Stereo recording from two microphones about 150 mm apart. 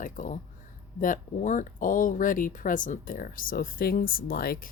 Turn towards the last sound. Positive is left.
turn(degrees=75)  # may be behind; listen again after turning